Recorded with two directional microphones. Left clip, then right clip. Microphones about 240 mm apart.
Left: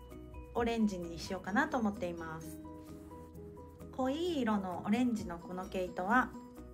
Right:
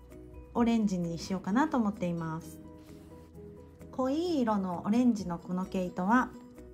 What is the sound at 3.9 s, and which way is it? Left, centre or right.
Speech, right.